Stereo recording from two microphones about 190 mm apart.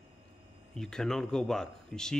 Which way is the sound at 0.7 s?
5° left (ahead or behind).